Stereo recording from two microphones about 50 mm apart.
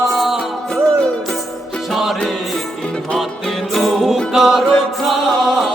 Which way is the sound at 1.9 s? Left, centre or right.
Centre.